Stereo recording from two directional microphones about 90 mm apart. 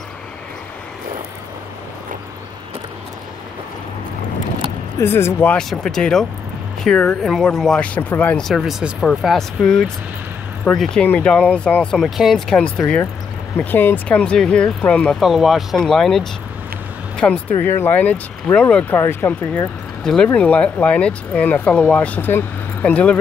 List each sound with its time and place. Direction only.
4.9 s speech: 30° left (ahead or behind)
5.6 s speech: 5° left (ahead or behind)
12.0 s speech: centre (ahead or behind)
15.1 s speech: centre (ahead or behind); by 17.4 s 15° left (ahead or behind)
17.6 s speech: 25° left (ahead or behind)
18.9 s speech: 25° left (ahead or behind)
20.0 s speech: 5° left (ahead or behind)